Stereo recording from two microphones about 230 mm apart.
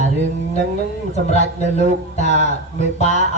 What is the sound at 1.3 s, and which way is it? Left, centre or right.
Speech, left.